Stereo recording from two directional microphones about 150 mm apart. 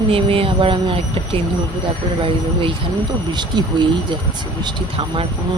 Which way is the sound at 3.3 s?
30° right (ahead or behind).